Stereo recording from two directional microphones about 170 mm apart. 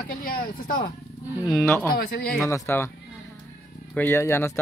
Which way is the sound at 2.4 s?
15° left (ahead or behind).